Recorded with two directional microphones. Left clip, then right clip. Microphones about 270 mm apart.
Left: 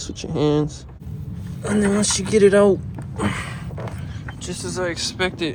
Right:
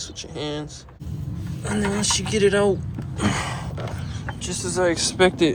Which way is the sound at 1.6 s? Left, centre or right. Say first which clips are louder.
Left 3 dB; centre.